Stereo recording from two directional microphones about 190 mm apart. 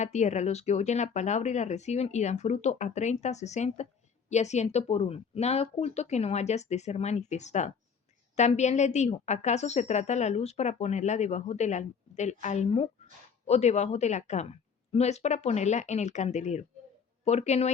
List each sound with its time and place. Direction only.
0.0 s a woman's voice: 35° left (ahead or behind)